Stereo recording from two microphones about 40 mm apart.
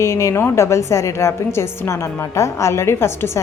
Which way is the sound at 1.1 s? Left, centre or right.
Left.